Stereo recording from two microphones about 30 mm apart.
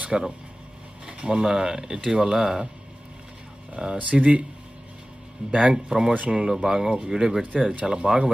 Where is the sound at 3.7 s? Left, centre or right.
Right.